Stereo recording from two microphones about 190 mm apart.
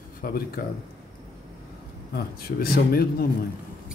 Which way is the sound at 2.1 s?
50° left (ahead or behind).